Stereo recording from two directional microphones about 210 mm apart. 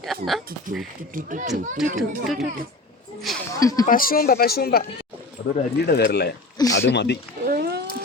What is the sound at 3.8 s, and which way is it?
Speech, 40° left (ahead or behind).